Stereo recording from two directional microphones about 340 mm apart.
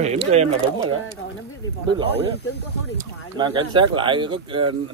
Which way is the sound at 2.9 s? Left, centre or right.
Centre.